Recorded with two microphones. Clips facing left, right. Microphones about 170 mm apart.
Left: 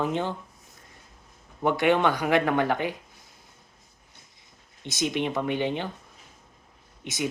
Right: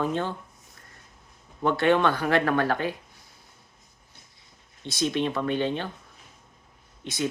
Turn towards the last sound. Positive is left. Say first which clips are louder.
# right 1 dB
turn(degrees=15)  # may be behind; listen again after turning